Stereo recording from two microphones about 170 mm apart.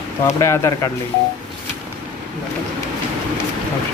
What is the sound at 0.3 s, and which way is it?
Speech, 20° left (ahead or behind).